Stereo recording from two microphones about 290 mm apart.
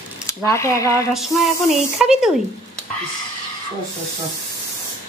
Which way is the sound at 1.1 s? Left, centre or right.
Centre.